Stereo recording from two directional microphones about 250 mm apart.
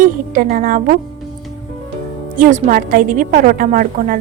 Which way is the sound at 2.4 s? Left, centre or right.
Right.